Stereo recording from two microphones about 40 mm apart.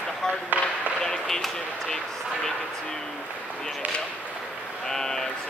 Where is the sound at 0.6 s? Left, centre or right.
Right.